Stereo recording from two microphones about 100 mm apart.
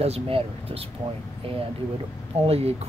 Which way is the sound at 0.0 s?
85° right.